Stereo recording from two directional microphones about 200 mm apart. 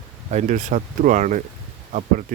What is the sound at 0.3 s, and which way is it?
Speech, 35° right (ahead or behind).